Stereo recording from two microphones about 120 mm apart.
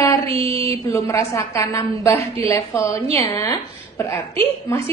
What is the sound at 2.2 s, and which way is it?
Speech, 55° right (ahead or behind).